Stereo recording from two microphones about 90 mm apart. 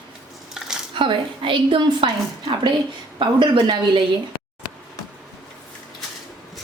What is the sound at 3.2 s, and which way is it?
Speech, 60° right (ahead or behind).